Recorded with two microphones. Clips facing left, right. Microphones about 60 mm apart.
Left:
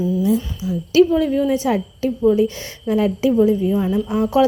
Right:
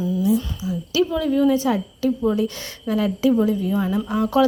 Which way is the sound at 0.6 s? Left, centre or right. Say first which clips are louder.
Left 3 dB; right.